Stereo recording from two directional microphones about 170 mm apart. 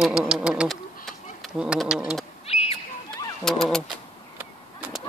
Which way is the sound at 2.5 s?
35° left (ahead or behind).